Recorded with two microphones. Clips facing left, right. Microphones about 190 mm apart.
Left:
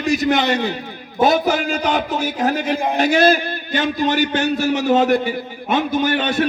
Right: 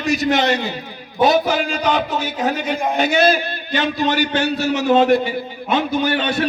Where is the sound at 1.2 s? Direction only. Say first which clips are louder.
Even; 50° left (ahead or behind).